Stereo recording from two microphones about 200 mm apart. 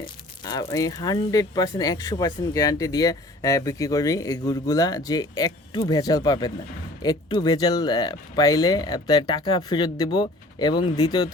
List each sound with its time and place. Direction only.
0.0 s speech: 20° left (ahead or behind)